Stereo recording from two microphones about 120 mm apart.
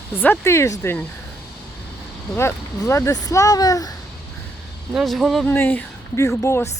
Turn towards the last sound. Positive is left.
turn(degrees=25)  # may be behind; listen again after turning